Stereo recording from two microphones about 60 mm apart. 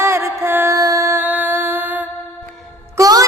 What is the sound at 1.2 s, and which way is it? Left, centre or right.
Music, right.